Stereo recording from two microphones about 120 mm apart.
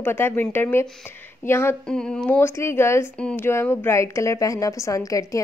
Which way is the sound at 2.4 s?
20° left (ahead or behind).